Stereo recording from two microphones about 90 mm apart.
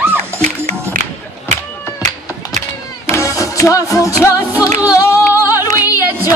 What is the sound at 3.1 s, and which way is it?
Music, 35° left (ahead or behind).